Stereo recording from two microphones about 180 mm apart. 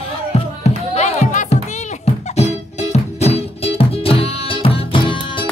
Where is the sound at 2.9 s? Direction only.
35° left (ahead or behind).